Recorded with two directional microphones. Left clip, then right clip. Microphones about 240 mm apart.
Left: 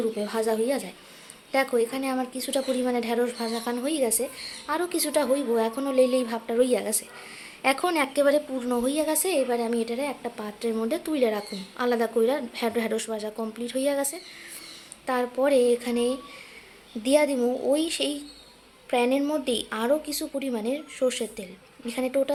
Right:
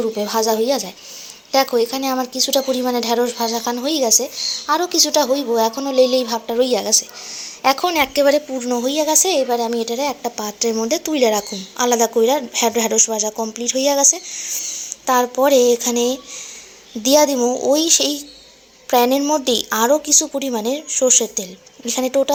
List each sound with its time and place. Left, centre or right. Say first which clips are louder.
0.0 s a woman's voice: right 8 dB; centre